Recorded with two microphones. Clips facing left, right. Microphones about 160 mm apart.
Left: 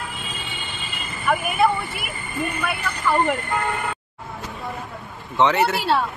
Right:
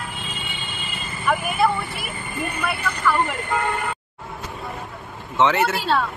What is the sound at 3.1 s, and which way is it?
Speech, 20° left (ahead or behind).